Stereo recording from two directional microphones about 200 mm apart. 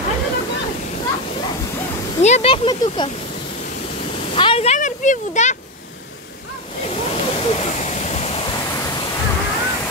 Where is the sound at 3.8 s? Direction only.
30° left (ahead or behind).